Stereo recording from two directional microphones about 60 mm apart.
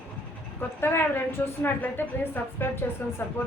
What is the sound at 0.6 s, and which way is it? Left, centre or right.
A woman's voice, left.